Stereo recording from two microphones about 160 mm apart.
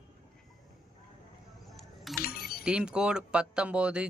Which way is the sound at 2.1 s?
Centre (ahead or behind).